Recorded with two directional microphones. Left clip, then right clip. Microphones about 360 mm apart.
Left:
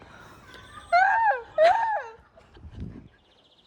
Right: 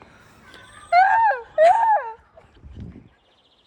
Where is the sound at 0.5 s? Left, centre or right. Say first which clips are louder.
Right 5 dB; right.